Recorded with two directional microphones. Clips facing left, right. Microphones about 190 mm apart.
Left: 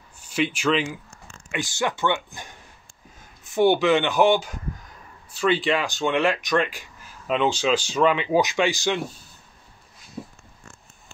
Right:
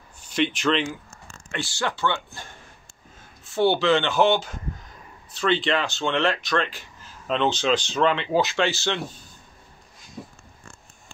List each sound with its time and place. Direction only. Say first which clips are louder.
0.2 s speech: even; 10° left (ahead or behind)
1.5 s speech: left 2 dB; 15° left (ahead or behind)